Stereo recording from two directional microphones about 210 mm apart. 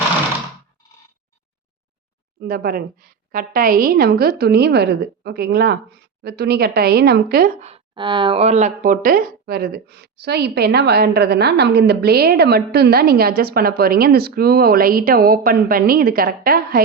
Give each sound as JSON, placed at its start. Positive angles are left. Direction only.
{"t": 2.4, "sound": "a woman's voice", "side_deg": -45}
{"t": 7.6, "sound": "a woman's voice", "side_deg": -25}